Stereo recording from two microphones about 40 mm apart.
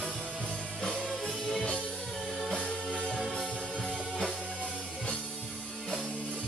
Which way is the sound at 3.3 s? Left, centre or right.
Centre.